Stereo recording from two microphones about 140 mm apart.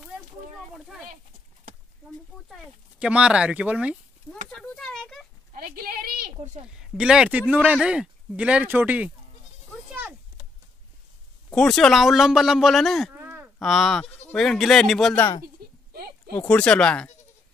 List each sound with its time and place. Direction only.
0.7 s speech: centre (ahead or behind)
2.5 s speech: 5° right (ahead or behind)
4.5 s speech: 5° left (ahead or behind)
5.5 s a woman's voice: 90° right
6.8 s speech: 5° right (ahead or behind)
11.5 s speech: 5° left (ahead or behind)
13.1 s a sound: 15° right (ahead or behind)
13.6 s speech: centre (ahead or behind)
15.4 s a sound: 90° right
16.3 s speech: 10° left (ahead or behind)